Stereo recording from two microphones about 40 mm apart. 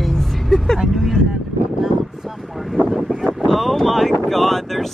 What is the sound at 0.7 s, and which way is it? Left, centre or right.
Speech, centre.